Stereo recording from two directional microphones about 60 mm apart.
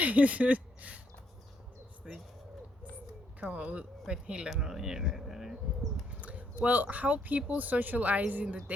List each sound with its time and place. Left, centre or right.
0.0 s speech: right
2.0 s speech: centre
3.4 s speech: right
4.4 s speech: centre
6.1 s a sound: right
6.7 s speech: right